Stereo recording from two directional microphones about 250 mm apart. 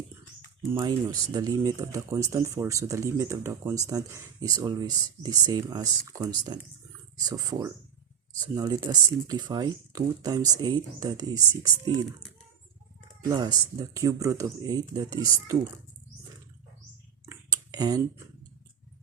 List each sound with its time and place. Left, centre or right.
0.7 s speech: centre
13.2 s speech: centre
17.2 s a sound: centre